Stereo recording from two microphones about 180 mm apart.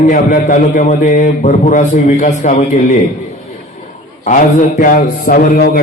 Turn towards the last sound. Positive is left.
turn(degrees=55)  # may be behind; listen again after turning